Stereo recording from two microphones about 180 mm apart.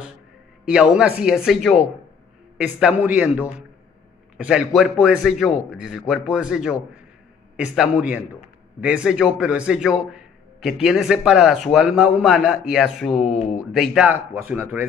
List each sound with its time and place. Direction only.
0.7 s a man's voice: 5° right (ahead or behind)
13.3 s speech: 40° left (ahead or behind)
13.6 s speech: centre (ahead or behind)